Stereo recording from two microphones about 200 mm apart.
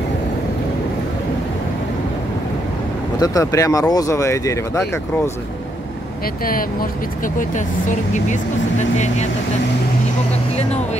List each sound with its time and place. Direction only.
3.2 s speech: 15° left (ahead or behind)
6.4 s speech: 45° left (ahead or behind)
8.1 s speech: 35° left (ahead or behind)
10.7 s speech: 35° left (ahead or behind)